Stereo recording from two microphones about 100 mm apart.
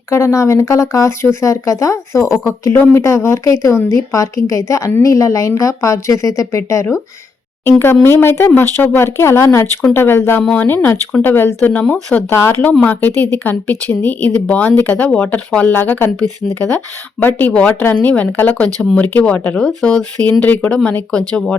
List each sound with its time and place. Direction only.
0.1 s a woman's voice: 30° left (ahead or behind); by 21.2 s 10° left (ahead or behind)